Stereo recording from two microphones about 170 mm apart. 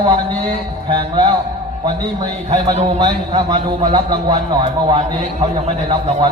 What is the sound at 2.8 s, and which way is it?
A man's voice, 25° right (ahead or behind).